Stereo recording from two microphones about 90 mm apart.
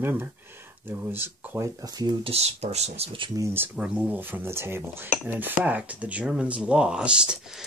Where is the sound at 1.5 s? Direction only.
35° right (ahead or behind).